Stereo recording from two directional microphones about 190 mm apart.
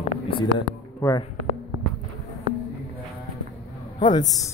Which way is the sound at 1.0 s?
15° left (ahead or behind).